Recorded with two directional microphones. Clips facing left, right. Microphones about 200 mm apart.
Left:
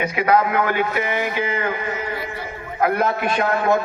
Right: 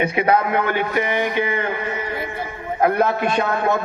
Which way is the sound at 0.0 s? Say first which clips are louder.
Even; 30° right (ahead or behind).